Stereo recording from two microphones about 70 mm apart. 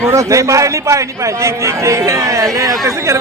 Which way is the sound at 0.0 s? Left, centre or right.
Right.